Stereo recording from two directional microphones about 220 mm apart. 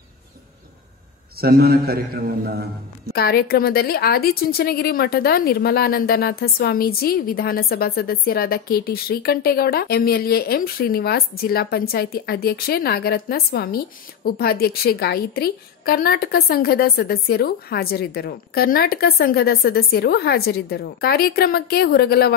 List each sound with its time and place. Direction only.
1.4 s a man's voice: 45° right (ahead or behind)
3.1 s a woman's voice: 45° left (ahead or behind)